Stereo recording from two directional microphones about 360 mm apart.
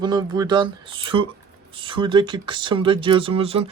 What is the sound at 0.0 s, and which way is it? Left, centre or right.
Speech, centre.